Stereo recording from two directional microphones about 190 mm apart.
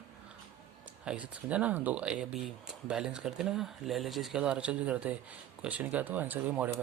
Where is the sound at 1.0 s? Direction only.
5° right (ahead or behind).